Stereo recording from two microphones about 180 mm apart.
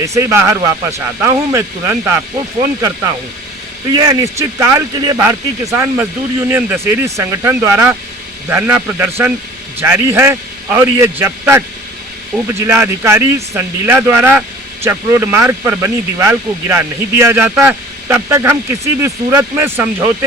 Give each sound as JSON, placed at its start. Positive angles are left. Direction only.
{"t": 0.0, "sound": "speech", "side_deg": -15}
{"t": 3.9, "sound": "speech", "side_deg": -20}